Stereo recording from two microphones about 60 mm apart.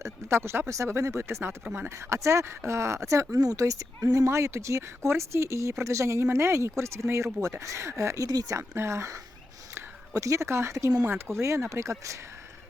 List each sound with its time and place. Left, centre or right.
0.0 s speech: right
0.7 s speech: right
2.0 s speech: right
3.3 s speech: right
8.7 s speech: right